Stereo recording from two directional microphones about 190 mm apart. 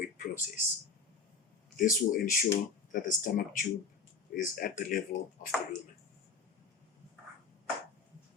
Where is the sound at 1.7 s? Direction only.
45° left (ahead or behind).